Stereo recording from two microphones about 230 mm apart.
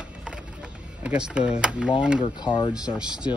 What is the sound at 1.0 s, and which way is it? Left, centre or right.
Speech, centre.